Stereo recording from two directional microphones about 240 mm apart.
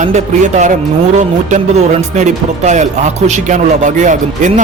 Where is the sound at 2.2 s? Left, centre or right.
Right.